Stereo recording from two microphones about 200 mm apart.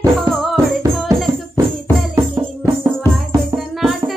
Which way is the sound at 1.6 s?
15° right (ahead or behind).